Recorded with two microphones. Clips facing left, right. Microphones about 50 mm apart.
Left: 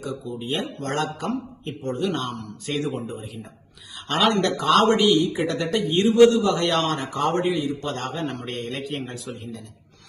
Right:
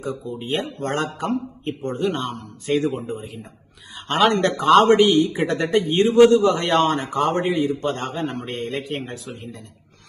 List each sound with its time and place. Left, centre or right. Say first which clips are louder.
0.0 s a man's voice: right 2 dB; right
8.9 s speech: right 2 dB; right